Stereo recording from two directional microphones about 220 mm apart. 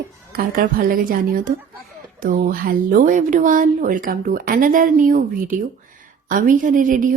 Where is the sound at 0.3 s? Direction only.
40° right (ahead or behind).